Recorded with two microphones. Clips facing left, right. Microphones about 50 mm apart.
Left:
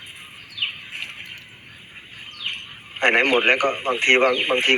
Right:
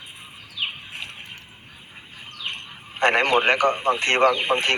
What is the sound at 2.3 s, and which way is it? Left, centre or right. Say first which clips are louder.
Speech: left 1 dB; left.